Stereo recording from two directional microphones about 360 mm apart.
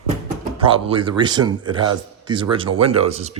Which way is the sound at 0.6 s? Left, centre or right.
Centre.